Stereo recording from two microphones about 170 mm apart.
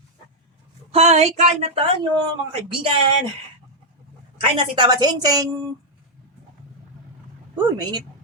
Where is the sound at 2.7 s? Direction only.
30° right (ahead or behind).